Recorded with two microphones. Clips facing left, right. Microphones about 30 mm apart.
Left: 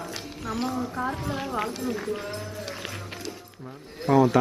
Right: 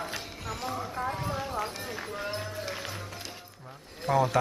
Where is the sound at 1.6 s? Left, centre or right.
Centre.